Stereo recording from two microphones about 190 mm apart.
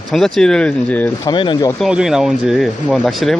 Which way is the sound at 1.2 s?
25° left (ahead or behind).